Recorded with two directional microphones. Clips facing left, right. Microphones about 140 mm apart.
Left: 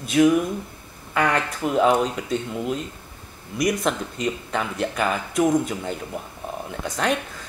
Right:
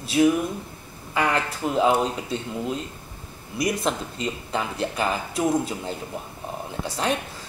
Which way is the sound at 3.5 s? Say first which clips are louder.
Left 2 dB; 30° right (ahead or behind).